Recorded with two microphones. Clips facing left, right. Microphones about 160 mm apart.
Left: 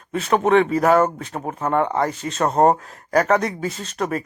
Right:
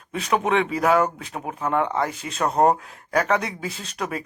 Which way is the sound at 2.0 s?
5° right (ahead or behind).